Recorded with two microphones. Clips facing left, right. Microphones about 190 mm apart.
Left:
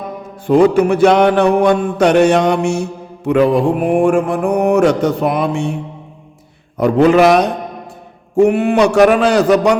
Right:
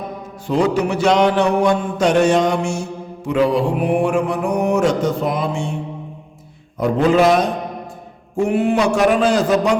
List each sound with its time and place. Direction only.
0.4 s mantra: 55° left (ahead or behind)
6.7 s a man's voice: 70° left (ahead or behind)